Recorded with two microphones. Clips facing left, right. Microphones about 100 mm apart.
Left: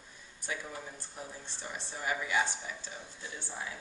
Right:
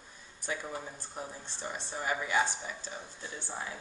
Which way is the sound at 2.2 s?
35° right (ahead or behind).